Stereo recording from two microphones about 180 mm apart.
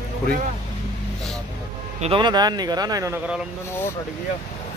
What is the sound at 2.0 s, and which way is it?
Speech, 30° right (ahead or behind).